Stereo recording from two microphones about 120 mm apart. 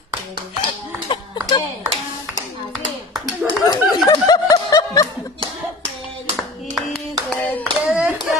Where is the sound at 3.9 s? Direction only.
35° left (ahead or behind).